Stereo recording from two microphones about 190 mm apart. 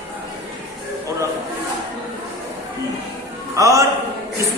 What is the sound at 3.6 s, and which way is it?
Speech, 15° right (ahead or behind).